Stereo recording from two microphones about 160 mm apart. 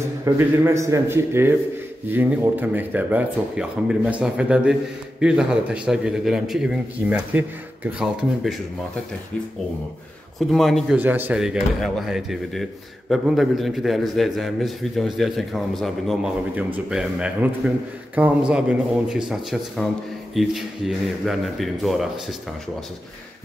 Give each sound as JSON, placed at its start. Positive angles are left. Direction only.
{"t": 0.2, "sound": "a man's voice", "side_deg": -20}
{"t": 10.5, "sound": "a man's voice", "side_deg": 0}
{"t": 11.0, "sound": "a man's voice", "side_deg": -10}